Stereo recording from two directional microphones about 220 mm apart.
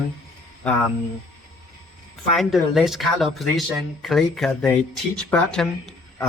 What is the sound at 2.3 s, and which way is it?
Speech, centre (ahead or behind).